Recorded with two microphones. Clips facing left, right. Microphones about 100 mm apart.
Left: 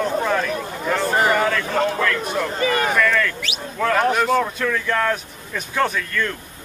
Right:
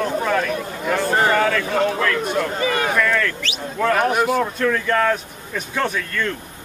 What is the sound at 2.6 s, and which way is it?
Speech, 40° left (ahead or behind).